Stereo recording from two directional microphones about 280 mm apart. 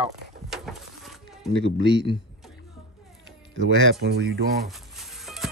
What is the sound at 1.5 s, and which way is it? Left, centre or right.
Speech, right.